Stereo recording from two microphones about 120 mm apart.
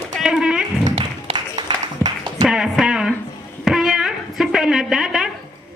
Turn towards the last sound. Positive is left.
turn(degrees=-5)  # may be behind; listen again after turning